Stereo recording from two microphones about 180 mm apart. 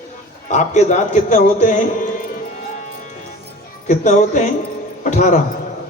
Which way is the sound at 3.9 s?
40° left (ahead or behind).